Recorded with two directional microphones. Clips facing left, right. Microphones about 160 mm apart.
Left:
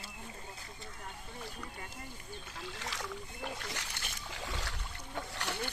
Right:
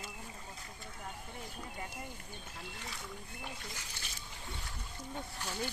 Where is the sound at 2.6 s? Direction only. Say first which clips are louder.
Left 5 dB; 90° left.